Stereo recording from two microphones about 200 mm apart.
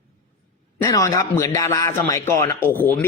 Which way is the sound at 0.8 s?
15° left (ahead or behind).